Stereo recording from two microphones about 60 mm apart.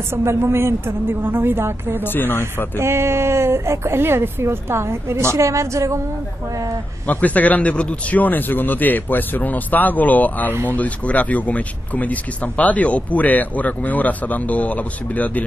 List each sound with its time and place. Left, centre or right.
0.1 s a woman's voice: right
2.1 s speech: left
2.8 s a woman's voice: right
7.1 s speech: left